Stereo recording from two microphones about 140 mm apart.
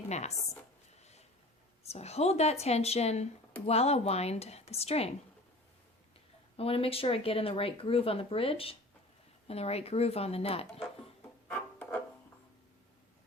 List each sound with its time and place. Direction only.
0.1 s speech: 50° left (ahead or behind)
1.8 s speech: 50° left (ahead or behind)
6.6 s speech: 45° left (ahead or behind)
11.5 s music: 15° left (ahead or behind)